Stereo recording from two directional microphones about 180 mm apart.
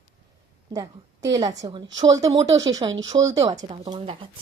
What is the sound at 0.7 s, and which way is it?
A woman's voice, 20° right (ahead or behind).